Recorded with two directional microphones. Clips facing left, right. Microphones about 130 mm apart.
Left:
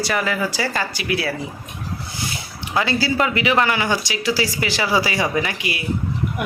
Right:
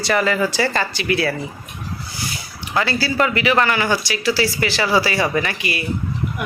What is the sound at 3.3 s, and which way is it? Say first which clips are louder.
Speech: right 1 dB; 20° left (ahead or behind).